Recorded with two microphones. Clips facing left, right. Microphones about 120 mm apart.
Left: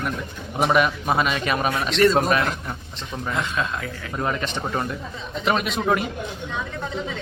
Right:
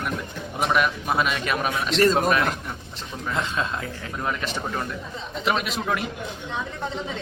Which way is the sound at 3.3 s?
25° right (ahead or behind).